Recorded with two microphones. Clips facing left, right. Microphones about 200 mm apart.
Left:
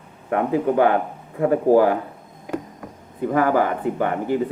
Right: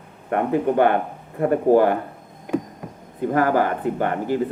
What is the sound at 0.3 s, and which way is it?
Speech, 5° left (ahead or behind).